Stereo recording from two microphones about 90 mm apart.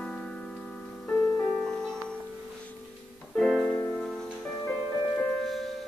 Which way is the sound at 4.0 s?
5° left (ahead or behind).